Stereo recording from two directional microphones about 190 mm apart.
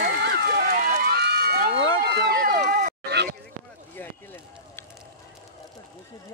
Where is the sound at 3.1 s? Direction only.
60° right (ahead or behind).